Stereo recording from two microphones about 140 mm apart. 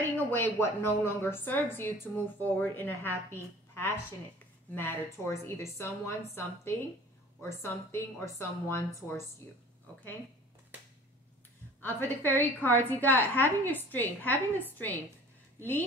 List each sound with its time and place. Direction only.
0.1 s a woman's voice: 15° left (ahead or behind)
4.7 s a woman's voice: 15° left (ahead or behind)
11.8 s a woman's voice: 15° left (ahead or behind)